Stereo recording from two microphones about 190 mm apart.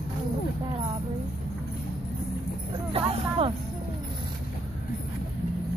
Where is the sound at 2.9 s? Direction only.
30° right (ahead or behind).